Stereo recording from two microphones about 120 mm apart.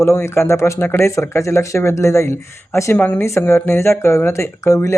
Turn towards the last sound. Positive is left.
turn(degrees=25)  # may be behind; listen again after turning